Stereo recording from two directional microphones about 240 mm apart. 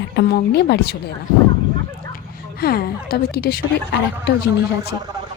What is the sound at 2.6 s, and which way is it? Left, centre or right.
Speech, left.